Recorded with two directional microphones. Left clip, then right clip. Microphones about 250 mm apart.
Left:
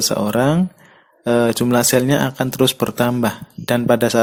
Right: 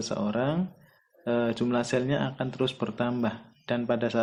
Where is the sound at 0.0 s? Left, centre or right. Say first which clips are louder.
Left 12 dB; left.